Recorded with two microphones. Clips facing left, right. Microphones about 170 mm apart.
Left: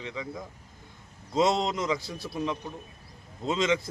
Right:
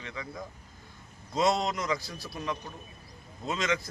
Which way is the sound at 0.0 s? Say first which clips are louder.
Left 3 dB; 20° left (ahead or behind).